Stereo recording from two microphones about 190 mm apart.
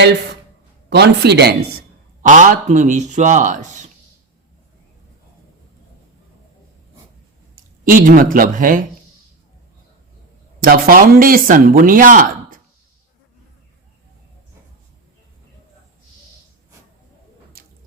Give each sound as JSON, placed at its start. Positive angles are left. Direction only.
{"t": 0.9, "sound": "a man's voice", "side_deg": -60}
{"t": 2.2, "sound": "speech", "side_deg": -40}
{"t": 7.5, "sound": "speech", "side_deg": -45}
{"t": 10.6, "sound": "speech", "side_deg": -50}
{"t": 17.6, "sound": "a sound", "side_deg": -50}